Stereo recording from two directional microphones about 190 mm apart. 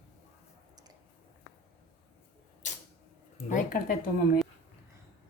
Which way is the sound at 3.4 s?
45° left (ahead or behind).